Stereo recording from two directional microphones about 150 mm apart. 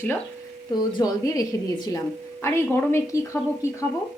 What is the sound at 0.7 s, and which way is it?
A woman's voice, 25° left (ahead or behind).